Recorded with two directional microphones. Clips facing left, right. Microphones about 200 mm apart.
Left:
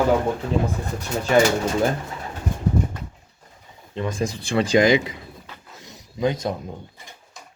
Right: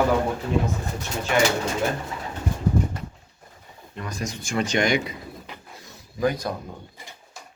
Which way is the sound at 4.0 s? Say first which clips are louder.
Left 7 dB; 25° left (ahead or behind).